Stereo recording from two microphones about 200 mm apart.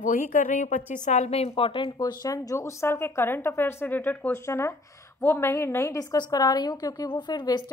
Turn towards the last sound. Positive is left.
turn(degrees=20)  # may be behind; listen again after turning